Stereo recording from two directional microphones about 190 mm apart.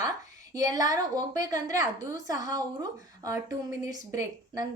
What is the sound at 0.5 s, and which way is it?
A woman's voice, 20° right (ahead or behind).